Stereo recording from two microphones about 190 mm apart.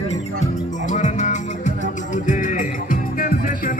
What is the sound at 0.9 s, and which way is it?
Music, 40° left (ahead or behind).